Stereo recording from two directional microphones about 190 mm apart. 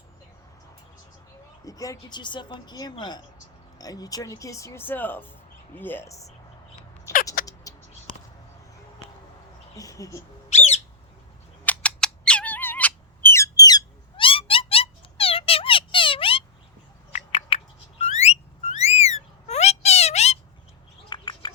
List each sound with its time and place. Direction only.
1.6 s speech: 20° left (ahead or behind)
7.4 s a sound: 50° left (ahead or behind)
9.7 s speech: 15° left (ahead or behind)
10.5 s bird: 35° left (ahead or behind)
11.6 s bird: 5° left (ahead or behind); by 16.4 s 30° left (ahead or behind)
17.1 s a sound: 35° left (ahead or behind)
21.1 s bird: 25° left (ahead or behind)